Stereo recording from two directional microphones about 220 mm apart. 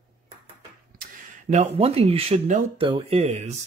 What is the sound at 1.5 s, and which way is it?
Speech, 30° right (ahead or behind).